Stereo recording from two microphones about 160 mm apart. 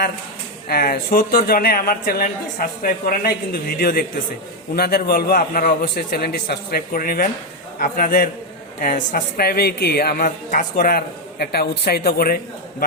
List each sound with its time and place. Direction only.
0.7 s a man's voice: 65° left (ahead or behind)